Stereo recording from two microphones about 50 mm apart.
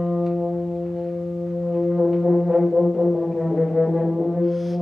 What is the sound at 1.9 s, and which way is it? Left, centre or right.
Brass instrument, centre.